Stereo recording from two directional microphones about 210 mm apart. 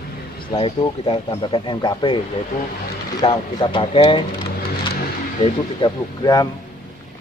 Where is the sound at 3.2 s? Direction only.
25° left (ahead or behind).